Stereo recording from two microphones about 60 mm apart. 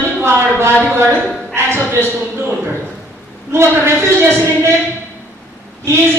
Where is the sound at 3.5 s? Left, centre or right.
Right.